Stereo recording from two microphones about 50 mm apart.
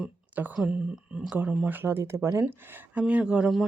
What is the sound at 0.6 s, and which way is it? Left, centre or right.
Speech, right.